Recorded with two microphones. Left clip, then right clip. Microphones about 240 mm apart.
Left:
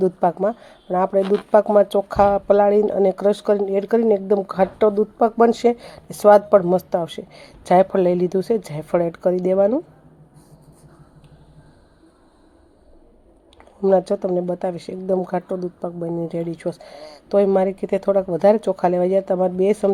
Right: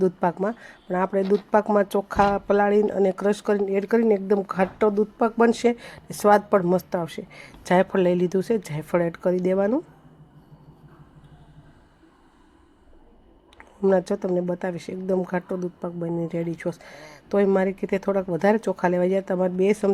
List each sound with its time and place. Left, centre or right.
0.0 s speech: right
13.6 s speech: centre